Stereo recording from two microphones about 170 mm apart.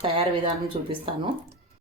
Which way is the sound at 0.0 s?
35° right (ahead or behind).